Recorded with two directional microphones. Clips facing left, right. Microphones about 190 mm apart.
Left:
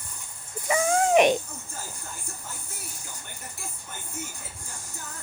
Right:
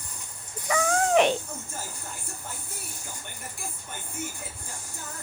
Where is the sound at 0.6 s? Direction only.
15° left (ahead or behind).